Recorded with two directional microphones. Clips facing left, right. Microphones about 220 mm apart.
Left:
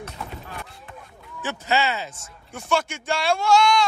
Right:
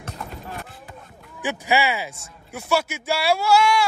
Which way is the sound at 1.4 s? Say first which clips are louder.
Right 2 dB; 15° right (ahead or behind).